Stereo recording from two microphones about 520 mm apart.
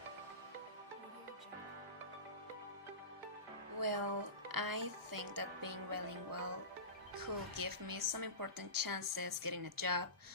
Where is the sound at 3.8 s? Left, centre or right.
Right.